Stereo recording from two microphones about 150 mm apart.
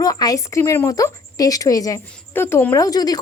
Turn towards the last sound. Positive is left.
turn(degrees=25)  # may be behind; listen again after turning